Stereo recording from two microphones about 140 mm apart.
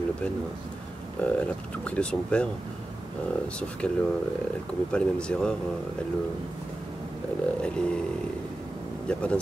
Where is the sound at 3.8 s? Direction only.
5° left (ahead or behind).